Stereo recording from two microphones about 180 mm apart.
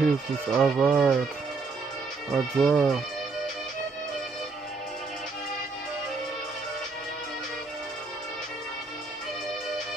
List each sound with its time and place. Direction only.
0.0 s speech: centre (ahead or behind)
2.3 s speech: centre (ahead or behind)